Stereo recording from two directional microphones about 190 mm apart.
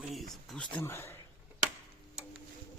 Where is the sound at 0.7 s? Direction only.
10° left (ahead or behind).